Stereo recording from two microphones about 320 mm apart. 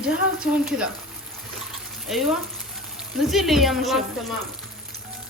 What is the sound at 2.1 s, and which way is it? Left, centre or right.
Speech, centre.